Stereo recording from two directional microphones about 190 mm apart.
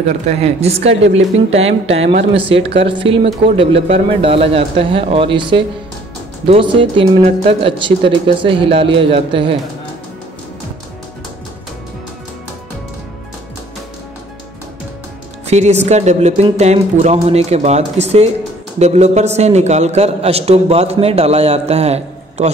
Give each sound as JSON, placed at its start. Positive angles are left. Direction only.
{"t": 0.4, "sound": "a man's voice", "side_deg": -35}
{"t": 15.4, "sound": "a man's voice", "side_deg": -35}